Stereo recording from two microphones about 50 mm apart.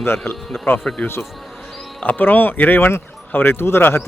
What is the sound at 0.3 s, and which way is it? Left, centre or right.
Speech, left.